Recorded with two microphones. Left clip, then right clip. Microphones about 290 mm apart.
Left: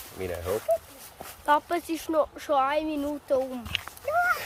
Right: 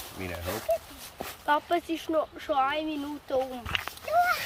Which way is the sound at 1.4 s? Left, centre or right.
Centre.